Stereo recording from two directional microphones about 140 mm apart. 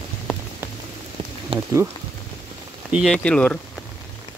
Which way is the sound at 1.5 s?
40° right (ahead or behind).